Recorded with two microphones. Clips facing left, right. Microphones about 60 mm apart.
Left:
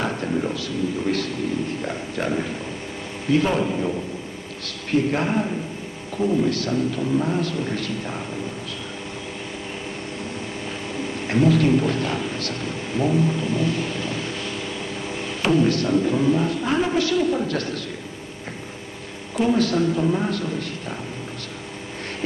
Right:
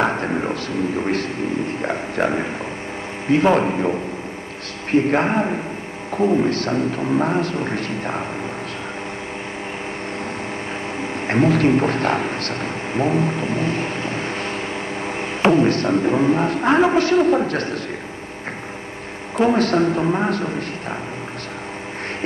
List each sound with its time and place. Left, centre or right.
0.0 s a sound: right
3.3 s a man's voice: right
4.9 s a man's voice: right
11.0 s a man's voice: right
19.3 s a man's voice: right